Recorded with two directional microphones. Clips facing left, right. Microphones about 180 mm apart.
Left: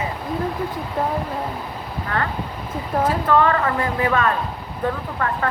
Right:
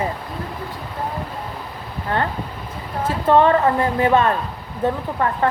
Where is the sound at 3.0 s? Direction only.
25° right (ahead or behind).